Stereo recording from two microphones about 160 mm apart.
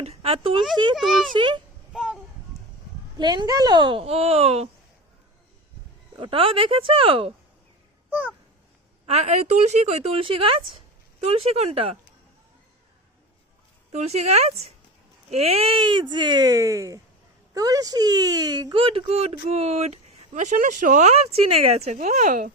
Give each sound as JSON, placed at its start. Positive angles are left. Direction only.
{"t": 0.0, "sound": "speech", "side_deg": -40}
{"t": 0.9, "sound": "a child's voice", "side_deg": 0}
{"t": 1.3, "sound": "speech", "side_deg": -30}
{"t": 1.9, "sound": "a sound", "side_deg": -5}
{"t": 3.2, "sound": "speech", "side_deg": -25}
{"t": 6.1, "sound": "speech", "side_deg": -35}
{"t": 8.1, "sound": "a sound", "side_deg": -10}
{"t": 9.0, "sound": "speech", "side_deg": -45}
{"t": 13.9, "sound": "speech", "side_deg": -45}